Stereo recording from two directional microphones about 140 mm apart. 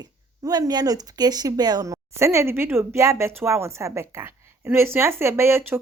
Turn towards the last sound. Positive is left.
turn(degrees=-15)  # may be behind; listen again after turning